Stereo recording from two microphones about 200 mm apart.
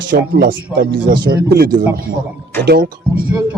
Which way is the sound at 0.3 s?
50° right (ahead or behind).